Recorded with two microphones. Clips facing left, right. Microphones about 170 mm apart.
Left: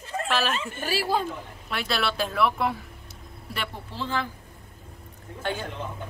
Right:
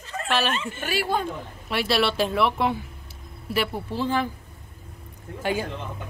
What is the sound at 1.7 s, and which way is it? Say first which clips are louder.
Speech: right 5 dB; 5° right (ahead or behind).